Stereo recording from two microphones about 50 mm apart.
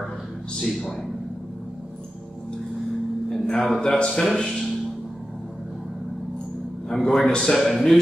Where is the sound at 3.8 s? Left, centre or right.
Centre.